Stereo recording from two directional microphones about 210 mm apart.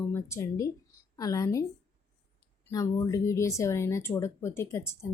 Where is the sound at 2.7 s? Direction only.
15° left (ahead or behind).